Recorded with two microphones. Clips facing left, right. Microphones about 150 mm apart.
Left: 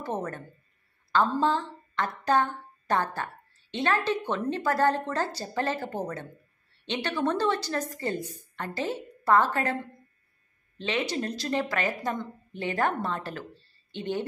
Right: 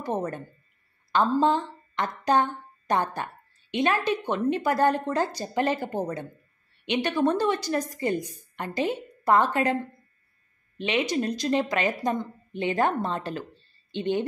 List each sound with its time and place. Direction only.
0.0 s a woman's voice: 15° right (ahead or behind)
10.8 s a woman's voice: 15° right (ahead or behind)